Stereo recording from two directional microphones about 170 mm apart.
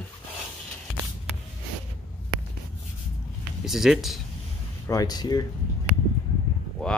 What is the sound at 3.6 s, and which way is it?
Speech, centre (ahead or behind).